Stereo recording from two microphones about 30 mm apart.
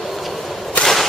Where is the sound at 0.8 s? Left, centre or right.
Left.